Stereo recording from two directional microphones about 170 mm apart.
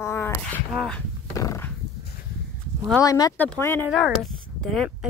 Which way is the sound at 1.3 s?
20° left (ahead or behind).